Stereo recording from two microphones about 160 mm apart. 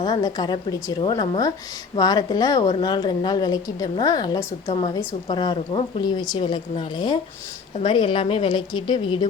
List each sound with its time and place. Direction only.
0.0 s a woman's voice: 25° left (ahead or behind)